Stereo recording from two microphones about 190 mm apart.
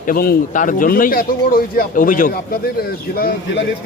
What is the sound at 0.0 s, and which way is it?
A man's voice, 50° left (ahead or behind).